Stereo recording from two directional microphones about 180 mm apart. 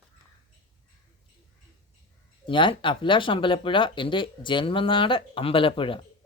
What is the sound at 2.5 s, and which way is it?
Speech, 25° left (ahead or behind).